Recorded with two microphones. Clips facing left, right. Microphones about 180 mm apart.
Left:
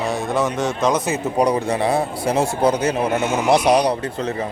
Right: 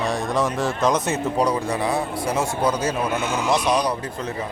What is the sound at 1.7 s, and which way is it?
Speech, 30° left (ahead or behind).